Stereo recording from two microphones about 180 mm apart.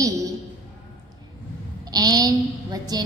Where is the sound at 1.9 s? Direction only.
20° right (ahead or behind).